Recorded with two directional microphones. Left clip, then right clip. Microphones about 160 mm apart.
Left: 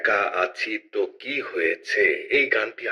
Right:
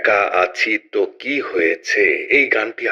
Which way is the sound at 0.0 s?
55° right (ahead or behind).